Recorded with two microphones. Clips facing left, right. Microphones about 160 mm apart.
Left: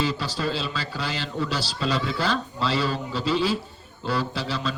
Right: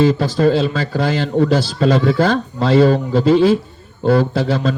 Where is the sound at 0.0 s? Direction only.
50° right (ahead or behind).